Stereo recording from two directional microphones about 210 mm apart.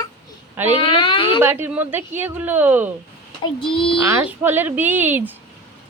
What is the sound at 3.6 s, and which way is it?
Speech, 25° left (ahead or behind).